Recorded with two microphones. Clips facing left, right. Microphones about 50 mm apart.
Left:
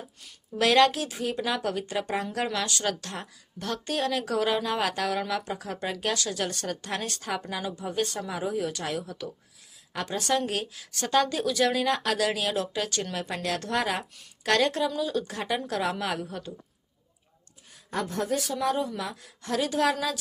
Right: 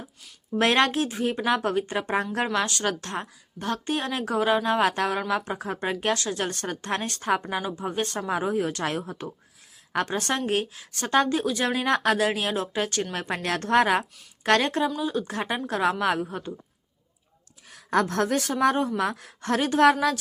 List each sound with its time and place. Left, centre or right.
0.6 s a woman's voice: right
7.4 s a woman's voice: right
7.8 s speech: right
14.4 s a woman's voice: right
17.7 s a woman's voice: right
18.6 s a woman's voice: right